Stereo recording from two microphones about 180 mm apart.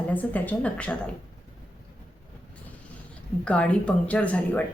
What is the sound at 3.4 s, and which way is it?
A woman's voice, 5° left (ahead or behind).